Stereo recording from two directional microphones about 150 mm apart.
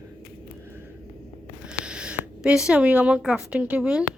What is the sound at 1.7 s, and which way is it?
Speech, 5° right (ahead or behind).